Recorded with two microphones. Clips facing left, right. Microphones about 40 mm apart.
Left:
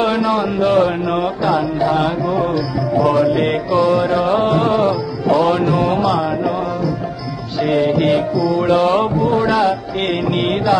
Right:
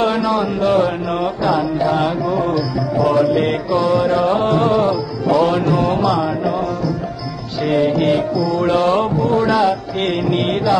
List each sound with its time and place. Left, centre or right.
0.0 s speech: centre
0.7 s music: centre
7.6 s music: centre